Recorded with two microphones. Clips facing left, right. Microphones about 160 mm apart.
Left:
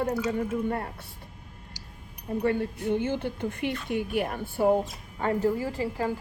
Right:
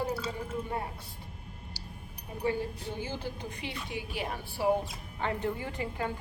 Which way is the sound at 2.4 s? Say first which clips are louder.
Left 4 dB; 60° left (ahead or behind).